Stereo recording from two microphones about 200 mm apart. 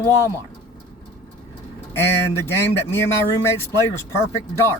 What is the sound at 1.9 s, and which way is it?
Speech, 10° left (ahead or behind).